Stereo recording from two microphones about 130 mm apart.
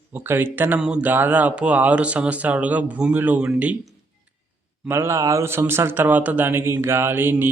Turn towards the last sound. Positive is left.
turn(degrees=-15)  # may be behind; listen again after turning